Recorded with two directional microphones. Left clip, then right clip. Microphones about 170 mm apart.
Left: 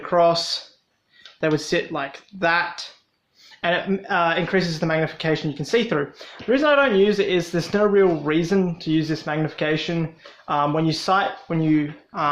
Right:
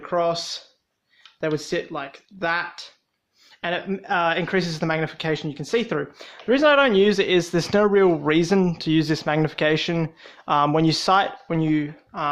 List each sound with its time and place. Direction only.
0.0 s speech: 20° right (ahead or behind); by 11.9 s 40° right (ahead or behind)
12.1 s speech: 30° right (ahead or behind)